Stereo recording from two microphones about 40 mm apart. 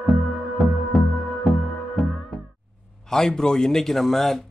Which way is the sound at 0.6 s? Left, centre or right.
Centre.